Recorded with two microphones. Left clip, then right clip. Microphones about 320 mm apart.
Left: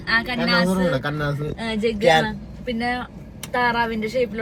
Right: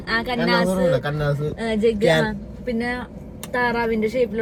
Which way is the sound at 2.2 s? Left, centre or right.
Centre.